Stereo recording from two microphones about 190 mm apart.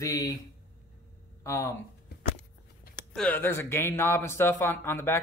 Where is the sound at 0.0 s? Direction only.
15° left (ahead or behind).